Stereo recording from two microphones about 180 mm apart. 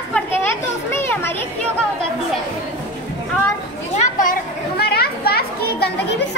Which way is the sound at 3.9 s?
45° left (ahead or behind).